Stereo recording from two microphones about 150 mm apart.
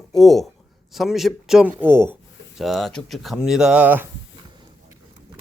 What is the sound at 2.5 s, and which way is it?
Speech, centre (ahead or behind).